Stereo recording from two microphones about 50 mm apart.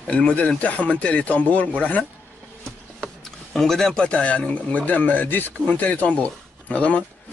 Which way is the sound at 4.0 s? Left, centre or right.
Left.